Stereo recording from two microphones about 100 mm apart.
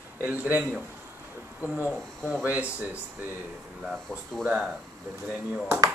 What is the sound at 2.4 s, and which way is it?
Speech, 15° right (ahead or behind).